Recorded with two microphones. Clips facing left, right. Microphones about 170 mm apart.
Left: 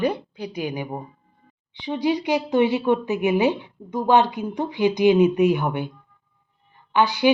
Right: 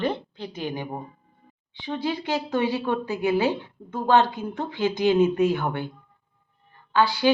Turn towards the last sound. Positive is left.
turn(degrees=20)  # may be behind; listen again after turning